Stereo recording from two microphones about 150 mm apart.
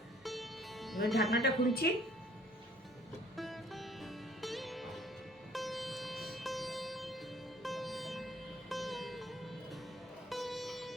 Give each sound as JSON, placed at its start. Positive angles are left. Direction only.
{"t": 0.3, "sound": "music", "side_deg": 0}
{"t": 1.3, "sound": "a woman's voice", "side_deg": 90}
{"t": 3.3, "sound": "music", "side_deg": 0}